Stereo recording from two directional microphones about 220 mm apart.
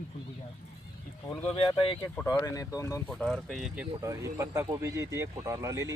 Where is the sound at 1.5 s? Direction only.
25° left (ahead or behind).